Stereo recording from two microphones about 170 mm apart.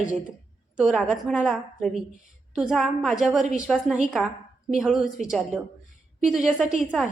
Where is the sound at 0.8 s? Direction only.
5° right (ahead or behind).